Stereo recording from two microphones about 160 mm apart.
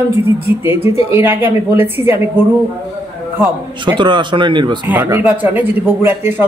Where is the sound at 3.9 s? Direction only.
30° right (ahead or behind).